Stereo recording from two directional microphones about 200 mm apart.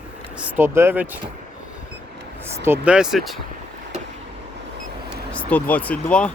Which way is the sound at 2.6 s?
10° right (ahead or behind).